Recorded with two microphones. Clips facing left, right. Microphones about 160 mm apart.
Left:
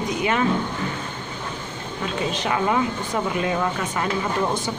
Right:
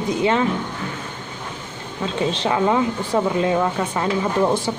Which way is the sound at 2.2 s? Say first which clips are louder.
Right 4 dB; 30° right (ahead or behind).